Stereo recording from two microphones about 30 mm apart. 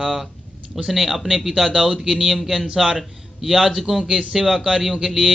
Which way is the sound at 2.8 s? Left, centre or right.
Centre.